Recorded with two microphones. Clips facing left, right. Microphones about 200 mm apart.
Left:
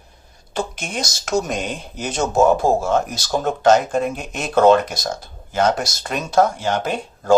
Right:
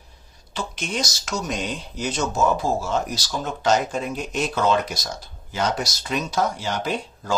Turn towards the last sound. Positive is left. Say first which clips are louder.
# left 2 dB
turn(degrees=50)  # may be behind; listen again after turning